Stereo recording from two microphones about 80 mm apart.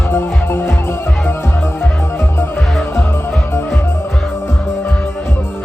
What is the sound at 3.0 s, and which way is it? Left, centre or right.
Music, left.